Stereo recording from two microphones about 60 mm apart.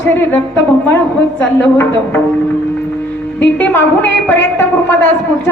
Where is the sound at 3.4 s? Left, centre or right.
Left.